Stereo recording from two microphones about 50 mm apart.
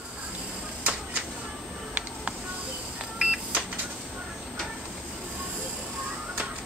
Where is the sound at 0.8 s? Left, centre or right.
Right.